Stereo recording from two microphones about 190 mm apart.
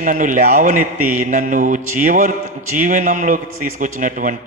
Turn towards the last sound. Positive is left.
turn(degrees=-40)  # may be behind; listen again after turning